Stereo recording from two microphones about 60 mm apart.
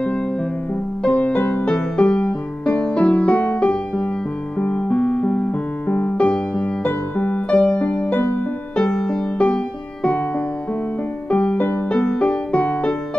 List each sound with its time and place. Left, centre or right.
1.0 s music: left
6.9 s music: left
8.2 s music: left
8.7 s music: centre
11.2 s music: left